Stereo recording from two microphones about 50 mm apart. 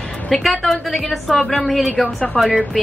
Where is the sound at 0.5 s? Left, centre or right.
Centre.